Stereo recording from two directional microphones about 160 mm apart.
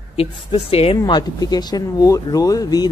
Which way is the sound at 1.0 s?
25° left (ahead or behind).